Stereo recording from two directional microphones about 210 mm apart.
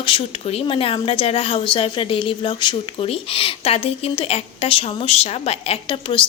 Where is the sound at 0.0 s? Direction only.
25° left (ahead or behind).